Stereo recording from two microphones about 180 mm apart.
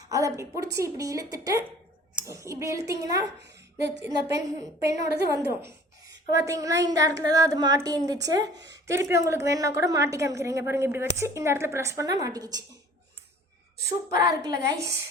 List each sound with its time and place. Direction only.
0.1 s a woman's voice: 20° right (ahead or behind)
3.4 s a sound: 75° right (ahead or behind)
4.0 s a woman's voice: 20° right (ahead or behind)
5.0 s a woman's voice: 65° right (ahead or behind)
6.3 s a woman's voice: 20° right (ahead or behind)
14.1 s a woman's voice: 20° right (ahead or behind)